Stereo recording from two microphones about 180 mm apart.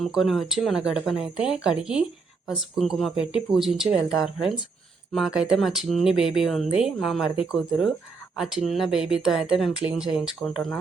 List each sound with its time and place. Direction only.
0.0 s speech: centre (ahead or behind)